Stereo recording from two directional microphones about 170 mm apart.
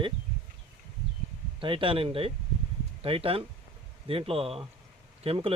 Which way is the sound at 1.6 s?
30° right (ahead or behind).